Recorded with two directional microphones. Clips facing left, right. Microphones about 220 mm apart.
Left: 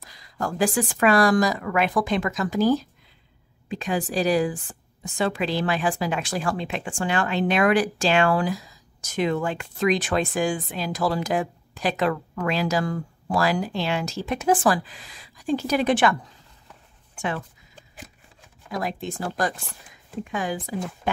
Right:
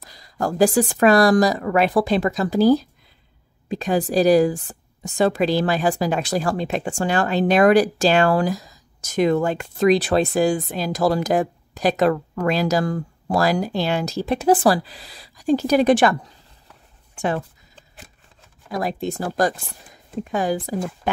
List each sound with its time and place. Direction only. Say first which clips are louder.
0.0 s a woman's voice: right 5 dB; 40° right (ahead or behind)
18.7 s a woman's voice: right 5 dB; 35° right (ahead or behind)